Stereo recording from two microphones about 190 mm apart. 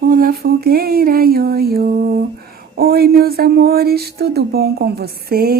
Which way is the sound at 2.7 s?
55° right (ahead or behind).